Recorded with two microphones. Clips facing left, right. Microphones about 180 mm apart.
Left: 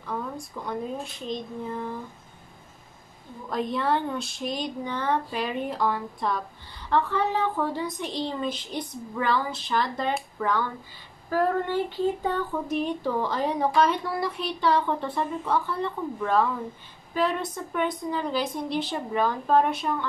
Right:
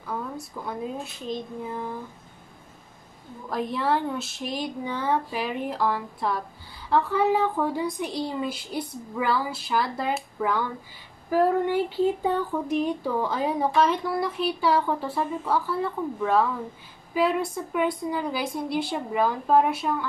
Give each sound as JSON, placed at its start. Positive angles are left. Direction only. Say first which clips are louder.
{"t": 0.0, "sound": "a woman's voice", "louder": "even", "side_deg": -5}
{"t": 1.3, "sound": "child singing", "louder": "right 1 dB", "side_deg": 20}
{"t": 3.4, "sound": "a woman's voice", "louder": "even", "side_deg": -5}